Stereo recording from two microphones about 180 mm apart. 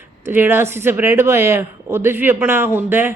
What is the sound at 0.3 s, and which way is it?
Speech, 10° right (ahead or behind).